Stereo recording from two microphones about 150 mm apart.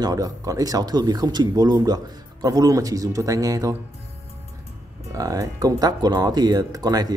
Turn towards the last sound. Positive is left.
turn(degrees=-25)  # may be behind; listen again after turning